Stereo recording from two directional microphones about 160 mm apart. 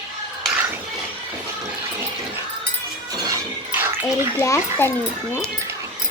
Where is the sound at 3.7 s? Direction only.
10° right (ahead or behind).